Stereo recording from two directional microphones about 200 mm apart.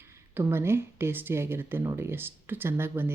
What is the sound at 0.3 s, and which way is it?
Speech, 10° right (ahead or behind).